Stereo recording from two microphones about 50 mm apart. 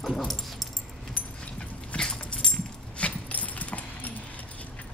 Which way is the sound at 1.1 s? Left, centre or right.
Left.